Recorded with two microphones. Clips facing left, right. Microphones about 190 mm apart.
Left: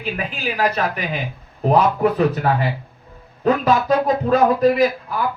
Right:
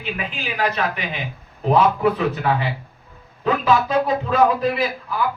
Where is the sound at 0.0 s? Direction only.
40° left (ahead or behind).